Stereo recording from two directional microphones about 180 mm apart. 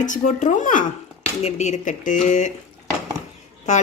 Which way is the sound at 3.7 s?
40° left (ahead or behind).